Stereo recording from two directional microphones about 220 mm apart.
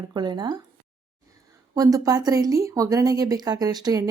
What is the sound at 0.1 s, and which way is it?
Speech, 20° right (ahead or behind).